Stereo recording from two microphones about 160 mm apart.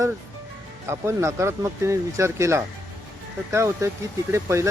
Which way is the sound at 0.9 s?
15° right (ahead or behind).